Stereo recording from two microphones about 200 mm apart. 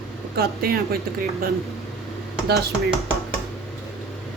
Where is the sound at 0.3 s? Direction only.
50° right (ahead or behind).